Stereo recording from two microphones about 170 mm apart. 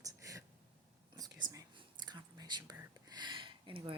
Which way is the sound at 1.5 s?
20° right (ahead or behind).